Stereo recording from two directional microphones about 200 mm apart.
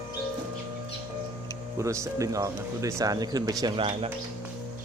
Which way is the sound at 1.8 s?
15° right (ahead or behind).